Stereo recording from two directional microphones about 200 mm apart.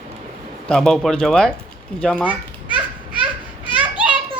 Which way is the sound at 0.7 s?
Centre (ahead or behind).